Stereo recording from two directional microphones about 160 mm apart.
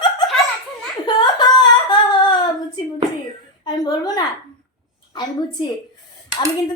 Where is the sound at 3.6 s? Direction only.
25° left (ahead or behind).